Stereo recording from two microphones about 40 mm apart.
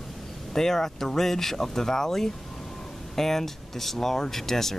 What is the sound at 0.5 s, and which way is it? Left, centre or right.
Speech, centre.